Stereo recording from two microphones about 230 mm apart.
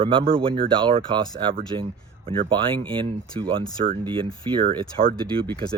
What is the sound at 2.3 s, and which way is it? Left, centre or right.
Speech, right.